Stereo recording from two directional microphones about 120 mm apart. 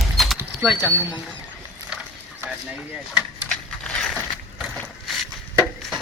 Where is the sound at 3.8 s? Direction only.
10° left (ahead or behind).